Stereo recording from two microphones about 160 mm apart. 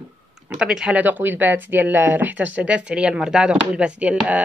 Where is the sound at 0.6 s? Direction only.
5° right (ahead or behind).